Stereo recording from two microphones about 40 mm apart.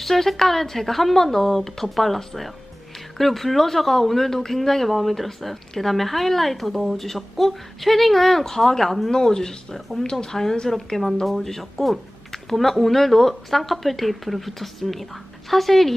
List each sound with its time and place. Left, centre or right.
0.0 s speech: centre